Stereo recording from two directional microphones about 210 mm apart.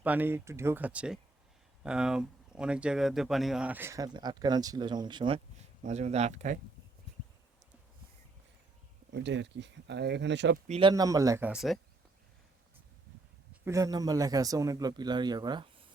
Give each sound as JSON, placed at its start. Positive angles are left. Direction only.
{"t": 0.0, "sound": "speech", "side_deg": -10}
{"t": 5.8, "sound": "speech", "side_deg": -30}
{"t": 9.1, "sound": "speech", "side_deg": -55}
{"t": 10.7, "sound": "speech", "side_deg": -25}
{"t": 13.7, "sound": "speech", "side_deg": -15}